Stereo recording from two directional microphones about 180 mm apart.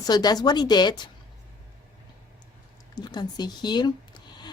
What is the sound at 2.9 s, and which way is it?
Speech, 25° left (ahead or behind).